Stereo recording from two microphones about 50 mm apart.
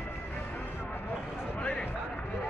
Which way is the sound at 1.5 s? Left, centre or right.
Left.